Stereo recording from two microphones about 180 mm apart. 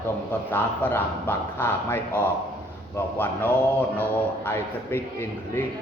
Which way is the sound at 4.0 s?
10° left (ahead or behind).